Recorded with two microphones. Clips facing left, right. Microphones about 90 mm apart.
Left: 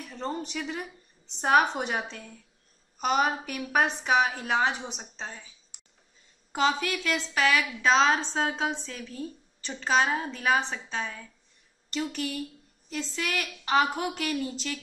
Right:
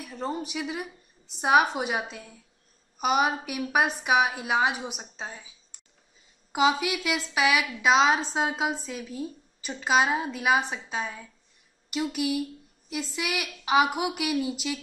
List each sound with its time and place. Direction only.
0.0 s a woman's voice: 5° right (ahead or behind)
5.7 s a sound: 15° left (ahead or behind)
6.5 s a woman's voice: 10° right (ahead or behind)